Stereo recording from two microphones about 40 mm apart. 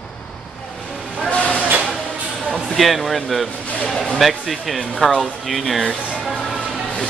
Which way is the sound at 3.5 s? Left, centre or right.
Left.